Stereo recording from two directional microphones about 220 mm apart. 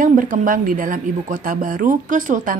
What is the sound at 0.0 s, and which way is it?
A woman's voice, 35° right (ahead or behind).